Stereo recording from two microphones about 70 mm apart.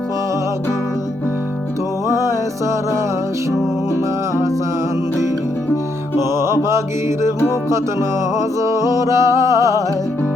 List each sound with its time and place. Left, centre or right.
6.3 s music: right
8.4 s music: right